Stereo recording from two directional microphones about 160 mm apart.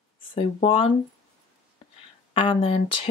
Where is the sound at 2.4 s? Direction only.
35° left (ahead or behind).